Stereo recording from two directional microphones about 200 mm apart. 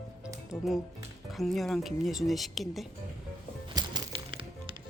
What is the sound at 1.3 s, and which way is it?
Speech, centre (ahead or behind).